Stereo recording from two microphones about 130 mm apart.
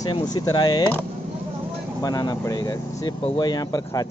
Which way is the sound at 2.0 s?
30° left (ahead or behind).